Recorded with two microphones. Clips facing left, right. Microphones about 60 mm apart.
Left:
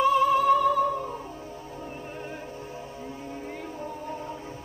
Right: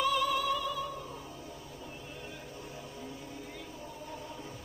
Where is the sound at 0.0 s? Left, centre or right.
Left.